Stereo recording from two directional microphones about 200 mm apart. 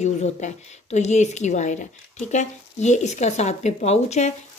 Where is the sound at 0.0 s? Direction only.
35° left (ahead or behind).